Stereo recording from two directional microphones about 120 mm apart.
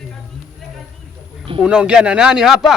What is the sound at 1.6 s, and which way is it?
Speech, 10° right (ahead or behind).